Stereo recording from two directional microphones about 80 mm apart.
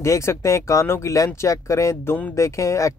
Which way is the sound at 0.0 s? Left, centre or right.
Left.